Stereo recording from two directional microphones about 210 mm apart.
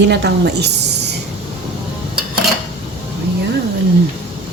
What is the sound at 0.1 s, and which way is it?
Speech, 55° right (ahead or behind).